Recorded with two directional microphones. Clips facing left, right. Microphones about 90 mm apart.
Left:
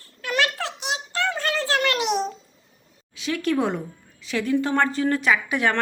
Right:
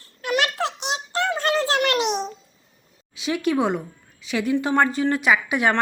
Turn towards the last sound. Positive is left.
turn(degrees=-10)  # may be behind; listen again after turning